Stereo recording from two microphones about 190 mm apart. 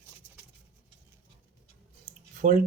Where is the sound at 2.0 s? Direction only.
40° right (ahead or behind).